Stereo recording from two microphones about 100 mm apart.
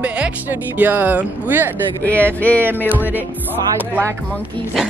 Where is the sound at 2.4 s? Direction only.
15° left (ahead or behind).